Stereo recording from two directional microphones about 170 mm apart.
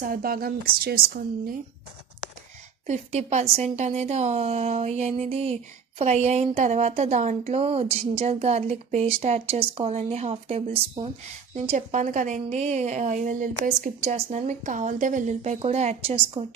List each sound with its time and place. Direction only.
0.0 s a woman's voice: 60° right (ahead or behind)
2.8 s a woman's voice: 40° right (ahead or behind)